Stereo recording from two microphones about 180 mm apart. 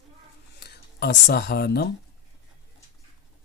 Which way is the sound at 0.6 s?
65° left (ahead or behind).